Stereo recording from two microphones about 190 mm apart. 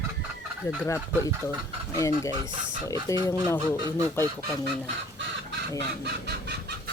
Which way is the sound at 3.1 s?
15° left (ahead or behind).